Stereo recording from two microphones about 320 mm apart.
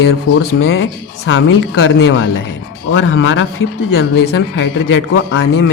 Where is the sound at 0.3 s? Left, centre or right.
Left.